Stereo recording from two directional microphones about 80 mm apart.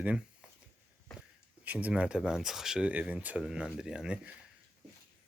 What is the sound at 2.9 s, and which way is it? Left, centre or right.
Speech, centre.